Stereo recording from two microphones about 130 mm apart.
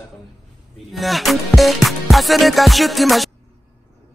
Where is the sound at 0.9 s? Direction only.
Centre (ahead or behind).